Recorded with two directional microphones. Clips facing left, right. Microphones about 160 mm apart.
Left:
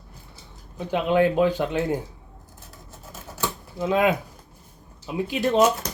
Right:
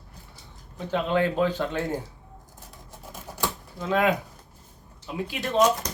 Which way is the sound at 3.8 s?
20° left (ahead or behind).